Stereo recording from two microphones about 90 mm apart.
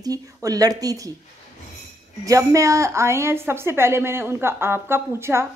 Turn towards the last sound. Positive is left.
turn(degrees=-30)  # may be behind; listen again after turning